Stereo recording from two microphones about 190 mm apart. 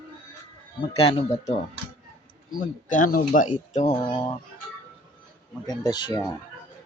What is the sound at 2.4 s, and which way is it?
Speech, 45° left (ahead or behind).